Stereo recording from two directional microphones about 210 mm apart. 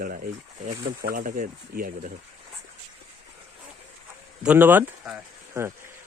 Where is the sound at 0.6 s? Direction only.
40° right (ahead or behind).